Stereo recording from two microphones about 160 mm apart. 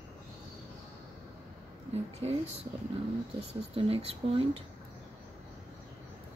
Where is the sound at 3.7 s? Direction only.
40° right (ahead or behind).